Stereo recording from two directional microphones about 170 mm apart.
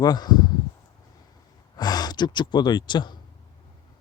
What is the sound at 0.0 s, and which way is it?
Speech, 25° left (ahead or behind).